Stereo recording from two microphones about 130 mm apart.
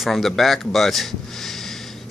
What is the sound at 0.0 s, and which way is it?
Speech, centre (ahead or behind).